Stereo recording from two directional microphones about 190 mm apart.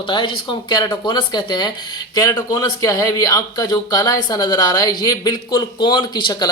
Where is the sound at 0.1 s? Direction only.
25° left (ahead or behind).